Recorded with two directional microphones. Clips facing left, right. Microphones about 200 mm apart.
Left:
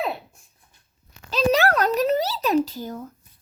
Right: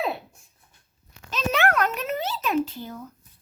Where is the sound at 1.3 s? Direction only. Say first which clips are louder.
Left 4 dB; 35° left (ahead or behind).